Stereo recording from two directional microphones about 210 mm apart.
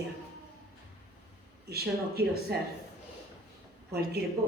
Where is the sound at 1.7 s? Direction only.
50° right (ahead or behind).